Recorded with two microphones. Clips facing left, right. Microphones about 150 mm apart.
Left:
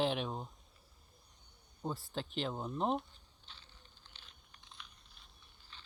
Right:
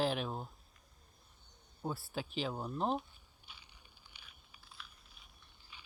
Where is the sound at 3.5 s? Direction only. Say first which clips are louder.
Even; 10° right (ahead or behind).